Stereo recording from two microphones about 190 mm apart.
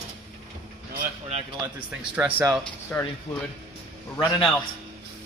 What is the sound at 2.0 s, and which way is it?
Speech, 10° right (ahead or behind).